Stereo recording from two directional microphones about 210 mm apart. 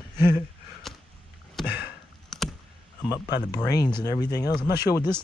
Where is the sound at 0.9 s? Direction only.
Centre (ahead or behind).